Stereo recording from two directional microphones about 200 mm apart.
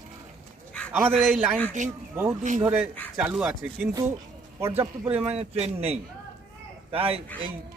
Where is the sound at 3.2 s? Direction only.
5° right (ahead or behind).